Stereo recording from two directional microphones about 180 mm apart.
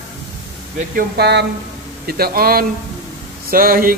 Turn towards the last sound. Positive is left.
turn(degrees=-50)  # may be behind; listen again after turning